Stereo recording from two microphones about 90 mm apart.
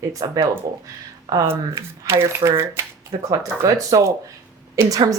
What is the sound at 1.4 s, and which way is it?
Speech, 30° right (ahead or behind).